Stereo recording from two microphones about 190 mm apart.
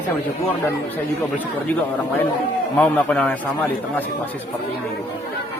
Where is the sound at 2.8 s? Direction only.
5° left (ahead or behind).